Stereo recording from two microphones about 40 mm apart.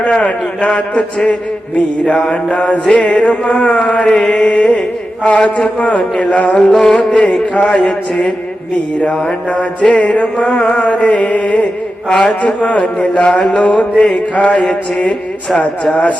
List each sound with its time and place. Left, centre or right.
0.1 s a man's voice: left
2.3 s mantra: left
2.8 s a man's voice: left
5.9 s mantra: left
6.6 s music: centre
6.9 s a man's voice: left
9.5 s mantra: left